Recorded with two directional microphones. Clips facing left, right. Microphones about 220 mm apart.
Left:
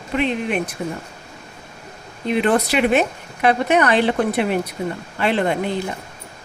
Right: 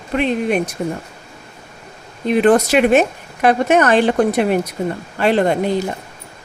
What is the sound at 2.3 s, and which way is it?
Speech, 45° right (ahead or behind).